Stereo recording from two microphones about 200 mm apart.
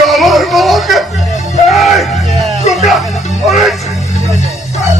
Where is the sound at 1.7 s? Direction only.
Centre (ahead or behind).